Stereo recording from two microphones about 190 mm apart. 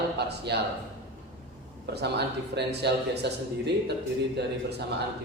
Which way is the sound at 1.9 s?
60° right (ahead or behind).